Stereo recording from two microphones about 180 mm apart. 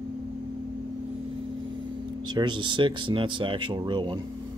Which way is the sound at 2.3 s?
25° right (ahead or behind).